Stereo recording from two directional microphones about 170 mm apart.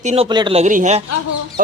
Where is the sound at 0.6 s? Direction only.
45° right (ahead or behind).